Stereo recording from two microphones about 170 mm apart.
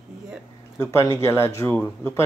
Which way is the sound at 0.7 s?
20° left (ahead or behind).